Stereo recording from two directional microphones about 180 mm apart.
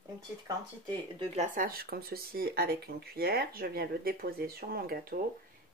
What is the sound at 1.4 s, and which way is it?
Speech, 50° right (ahead or behind).